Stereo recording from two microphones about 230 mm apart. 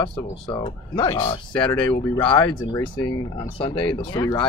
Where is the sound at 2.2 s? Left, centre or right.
Left.